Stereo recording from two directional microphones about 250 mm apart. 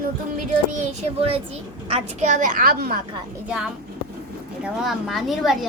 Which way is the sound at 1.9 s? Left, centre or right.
Right.